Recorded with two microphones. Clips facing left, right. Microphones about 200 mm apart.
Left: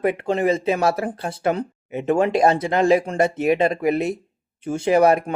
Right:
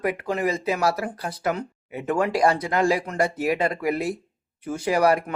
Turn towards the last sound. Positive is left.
turn(degrees=25)  # may be behind; listen again after turning